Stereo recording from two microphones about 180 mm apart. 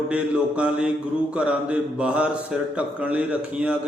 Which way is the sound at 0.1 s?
5° right (ahead or behind).